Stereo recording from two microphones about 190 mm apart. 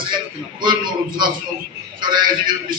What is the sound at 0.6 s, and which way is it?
A man's voice, 25° right (ahead or behind).